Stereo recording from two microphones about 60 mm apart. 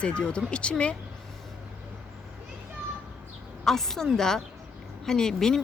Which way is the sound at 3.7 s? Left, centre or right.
Centre.